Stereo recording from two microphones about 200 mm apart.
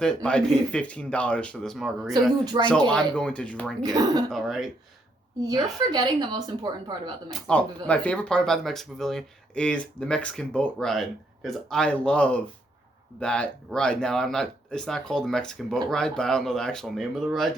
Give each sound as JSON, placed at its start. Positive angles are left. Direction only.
{"t": 0.0, "sound": "speech", "side_deg": 5}
{"t": 2.5, "sound": "a woman's voice", "side_deg": -25}
{"t": 2.9, "sound": "speech", "side_deg": 5}
{"t": 3.8, "sound": "a woman's voice", "side_deg": -20}
{"t": 4.3, "sound": "speech", "side_deg": 0}
{"t": 5.4, "sound": "a woman's voice", "side_deg": -20}
{"t": 7.3, "sound": "speech", "side_deg": 5}